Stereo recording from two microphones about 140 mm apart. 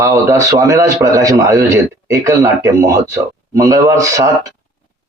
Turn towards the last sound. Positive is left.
turn(degrees=-25)  # may be behind; listen again after turning